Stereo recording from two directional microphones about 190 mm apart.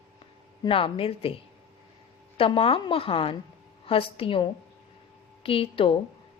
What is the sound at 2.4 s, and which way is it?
A woman's voice, 30° left (ahead or behind).